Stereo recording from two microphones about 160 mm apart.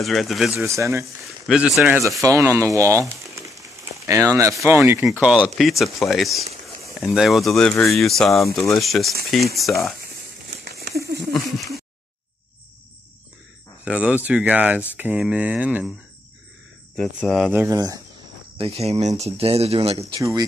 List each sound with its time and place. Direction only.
0.0 s speech: centre (ahead or behind)
0.7 s speech: 20° right (ahead or behind)
1.0 s speech: centre (ahead or behind)
2.2 s speech: 20° right (ahead or behind)
5.0 s speech: 5° right (ahead or behind)
10.5 s crumpling: 90° right
13.8 s speech: 5° right (ahead or behind)
16.9 s speech: 5° left (ahead or behind)
17.5 s speech: 15° right (ahead or behind)
18.6 s speech: 40° right (ahead or behind)
20.2 s speech: 20° right (ahead or behind)